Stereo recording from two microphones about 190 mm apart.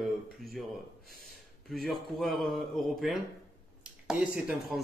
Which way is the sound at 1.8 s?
Centre (ahead or behind).